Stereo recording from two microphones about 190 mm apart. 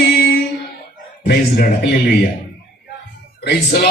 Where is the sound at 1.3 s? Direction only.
60° left (ahead or behind).